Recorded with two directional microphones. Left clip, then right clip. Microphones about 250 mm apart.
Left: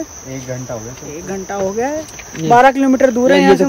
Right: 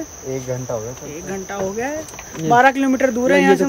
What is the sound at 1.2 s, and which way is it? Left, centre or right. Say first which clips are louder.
Speech: left 5 dB; centre.